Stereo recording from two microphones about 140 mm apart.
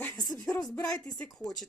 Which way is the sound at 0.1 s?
25° left (ahead or behind).